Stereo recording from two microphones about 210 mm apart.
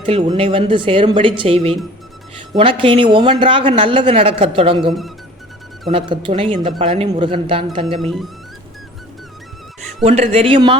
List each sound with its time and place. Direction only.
0.0 s speech: 25° right (ahead or behind)
5.9 s speech: 25° right (ahead or behind)
8.0 s speech: centre (ahead or behind)
10.0 s speech: 30° right (ahead or behind)